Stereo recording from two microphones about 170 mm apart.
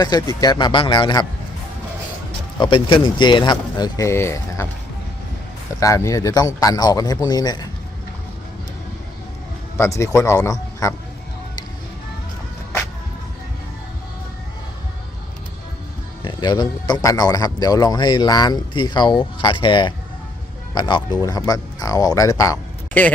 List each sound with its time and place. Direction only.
0.0 s a man's voice: 20° left (ahead or behind)
2.6 s a man's voice: 30° left (ahead or behind)
5.8 s a man's voice: 15° left (ahead or behind)
9.7 s speech: 15° left (ahead or behind)
16.2 s a man's voice: 25° left (ahead or behind)